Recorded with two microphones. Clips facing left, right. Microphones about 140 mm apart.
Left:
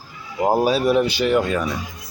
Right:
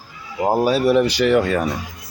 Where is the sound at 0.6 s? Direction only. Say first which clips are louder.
Right 4 dB; 60° right (ahead or behind).